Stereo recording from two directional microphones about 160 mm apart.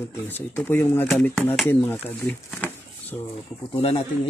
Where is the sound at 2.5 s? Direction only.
10° left (ahead or behind).